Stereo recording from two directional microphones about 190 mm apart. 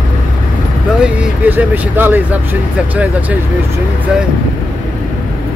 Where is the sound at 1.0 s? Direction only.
10° right (ahead or behind).